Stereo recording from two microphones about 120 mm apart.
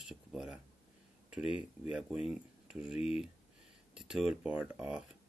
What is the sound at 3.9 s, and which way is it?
Speech, 5° right (ahead or behind).